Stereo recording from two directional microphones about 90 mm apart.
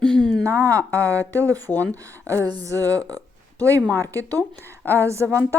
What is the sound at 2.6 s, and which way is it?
Speech, 35° right (ahead or behind).